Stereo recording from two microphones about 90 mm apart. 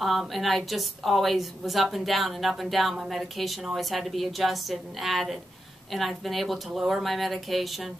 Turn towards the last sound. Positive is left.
turn(degrees=0)  # may be behind; listen again after turning